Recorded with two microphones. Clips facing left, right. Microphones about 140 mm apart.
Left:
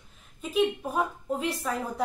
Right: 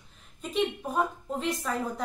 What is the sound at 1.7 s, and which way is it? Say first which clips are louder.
Speech: left 1 dB; 10° left (ahead or behind).